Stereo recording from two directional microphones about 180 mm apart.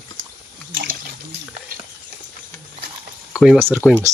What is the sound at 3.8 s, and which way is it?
Speech, 10° left (ahead or behind).